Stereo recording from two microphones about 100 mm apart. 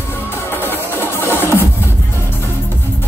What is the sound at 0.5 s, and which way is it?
Music, 20° left (ahead or behind).